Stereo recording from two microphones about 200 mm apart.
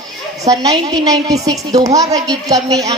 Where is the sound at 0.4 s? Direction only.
20° right (ahead or behind).